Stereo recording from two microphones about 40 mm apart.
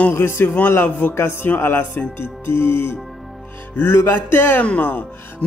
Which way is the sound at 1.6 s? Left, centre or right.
Left.